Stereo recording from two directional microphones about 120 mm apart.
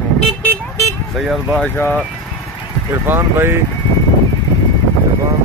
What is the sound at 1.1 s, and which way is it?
Speech, centre (ahead or behind).